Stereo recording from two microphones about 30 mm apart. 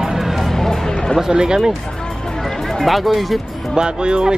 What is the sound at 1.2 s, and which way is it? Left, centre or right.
Speech, right.